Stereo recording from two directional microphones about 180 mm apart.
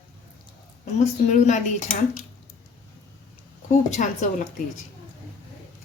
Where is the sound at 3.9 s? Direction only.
45° left (ahead or behind).